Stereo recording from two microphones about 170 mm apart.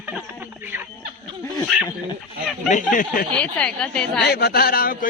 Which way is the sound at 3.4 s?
5° left (ahead or behind).